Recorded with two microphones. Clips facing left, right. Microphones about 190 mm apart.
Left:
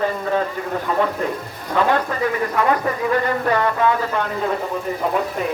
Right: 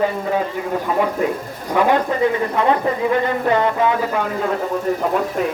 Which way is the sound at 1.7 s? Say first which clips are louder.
Right 2 dB; 15° right (ahead or behind).